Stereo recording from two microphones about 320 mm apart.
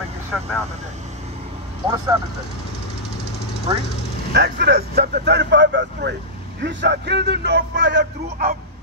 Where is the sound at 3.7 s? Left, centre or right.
Centre.